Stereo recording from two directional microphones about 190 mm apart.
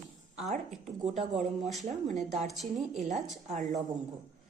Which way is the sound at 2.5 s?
Centre (ahead or behind).